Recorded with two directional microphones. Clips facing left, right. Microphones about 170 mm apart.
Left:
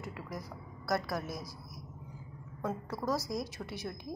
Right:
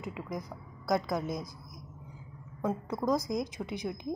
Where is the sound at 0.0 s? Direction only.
15° right (ahead or behind).